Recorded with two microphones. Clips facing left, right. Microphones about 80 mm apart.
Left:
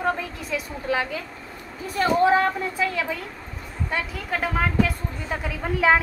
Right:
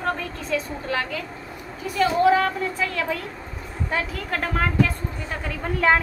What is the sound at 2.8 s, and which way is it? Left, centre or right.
A woman's voice, centre.